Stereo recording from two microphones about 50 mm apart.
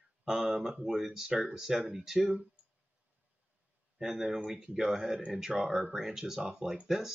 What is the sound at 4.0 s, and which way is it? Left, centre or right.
Speech, centre.